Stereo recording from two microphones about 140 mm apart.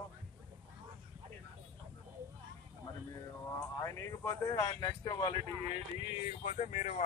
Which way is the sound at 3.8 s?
20° left (ahead or behind).